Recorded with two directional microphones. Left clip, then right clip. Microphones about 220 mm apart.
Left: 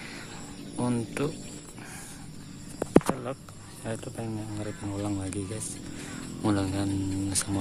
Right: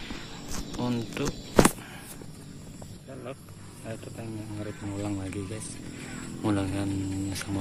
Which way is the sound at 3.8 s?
25° left (ahead or behind).